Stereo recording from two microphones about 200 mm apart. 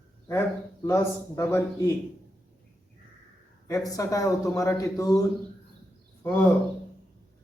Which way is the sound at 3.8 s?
15° left (ahead or behind).